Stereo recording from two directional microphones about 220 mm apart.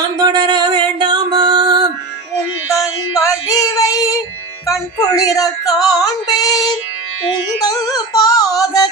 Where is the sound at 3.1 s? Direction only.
15° left (ahead or behind).